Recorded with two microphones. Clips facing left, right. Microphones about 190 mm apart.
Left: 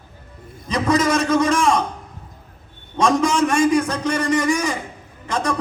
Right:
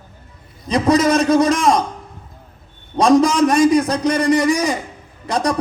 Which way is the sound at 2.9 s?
35° right (ahead or behind).